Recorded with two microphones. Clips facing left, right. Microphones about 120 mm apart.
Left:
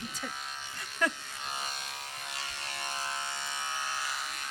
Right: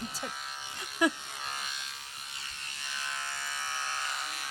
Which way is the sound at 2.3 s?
85° left.